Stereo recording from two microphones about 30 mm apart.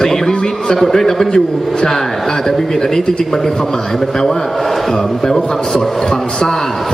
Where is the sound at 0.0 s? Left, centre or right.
Centre.